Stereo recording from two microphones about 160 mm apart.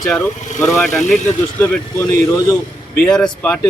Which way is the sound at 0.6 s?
20° left (ahead or behind).